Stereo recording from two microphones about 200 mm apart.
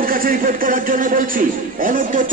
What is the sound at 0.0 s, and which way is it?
A man's voice, 45° right (ahead or behind).